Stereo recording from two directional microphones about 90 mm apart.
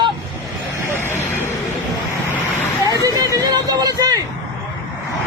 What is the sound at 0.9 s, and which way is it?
Speech, 30° left (ahead or behind).